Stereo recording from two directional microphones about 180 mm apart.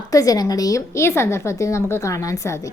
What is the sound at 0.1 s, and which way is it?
A woman's voice, 20° left (ahead or behind).